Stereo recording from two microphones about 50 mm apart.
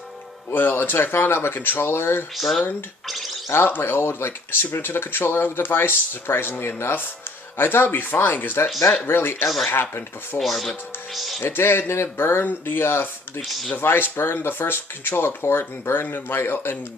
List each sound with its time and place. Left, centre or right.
0.5 s speech: left
1.9 s speech: left
2.3 s speech: centre
3.5 s speech: left
9.0 s speech: left
10.4 s speech: centre
11.4 s speech: left